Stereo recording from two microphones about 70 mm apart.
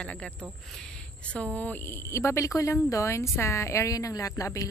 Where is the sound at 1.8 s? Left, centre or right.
Left.